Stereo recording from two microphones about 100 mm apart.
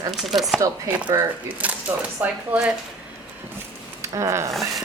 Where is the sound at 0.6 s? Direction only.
15° right (ahead or behind).